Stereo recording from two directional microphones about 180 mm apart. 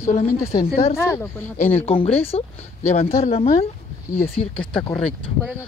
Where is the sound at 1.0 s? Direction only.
15° left (ahead or behind).